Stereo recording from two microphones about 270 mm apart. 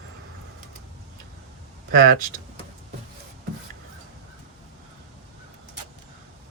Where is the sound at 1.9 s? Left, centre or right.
Right.